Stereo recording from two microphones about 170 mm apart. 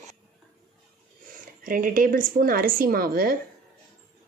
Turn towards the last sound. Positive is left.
turn(degrees=-60)  # may be behind; listen again after turning